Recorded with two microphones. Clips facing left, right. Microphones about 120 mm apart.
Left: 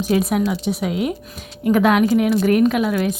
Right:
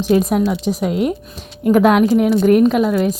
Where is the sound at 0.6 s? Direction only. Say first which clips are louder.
Right 3 dB; 35° right (ahead or behind).